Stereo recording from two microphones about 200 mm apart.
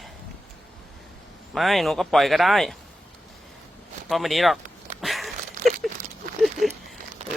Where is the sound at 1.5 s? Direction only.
Centre (ahead or behind).